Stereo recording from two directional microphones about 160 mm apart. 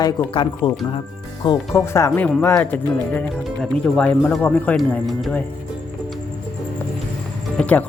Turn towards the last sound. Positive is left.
turn(degrees=10)  # may be behind; listen again after turning